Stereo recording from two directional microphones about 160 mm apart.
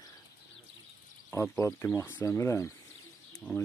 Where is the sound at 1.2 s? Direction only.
15° left (ahead or behind).